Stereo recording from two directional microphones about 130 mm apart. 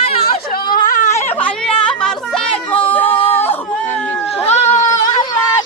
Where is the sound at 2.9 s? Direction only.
15° left (ahead or behind).